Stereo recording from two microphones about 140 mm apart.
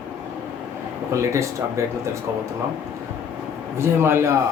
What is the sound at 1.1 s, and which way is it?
Speech, 20° right (ahead or behind).